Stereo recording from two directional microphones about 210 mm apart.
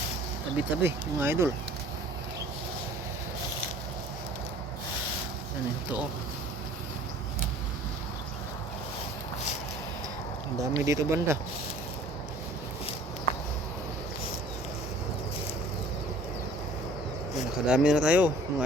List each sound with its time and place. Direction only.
0.5 s speech: 10° right (ahead or behind)
10.6 s speech: 15° right (ahead or behind)
17.7 s speech: 5° right (ahead or behind)